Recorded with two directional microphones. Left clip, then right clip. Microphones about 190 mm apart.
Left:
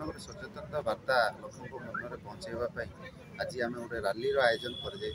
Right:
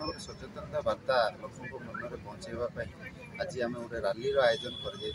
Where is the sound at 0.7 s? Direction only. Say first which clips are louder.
Right 1 dB; 15° left (ahead or behind).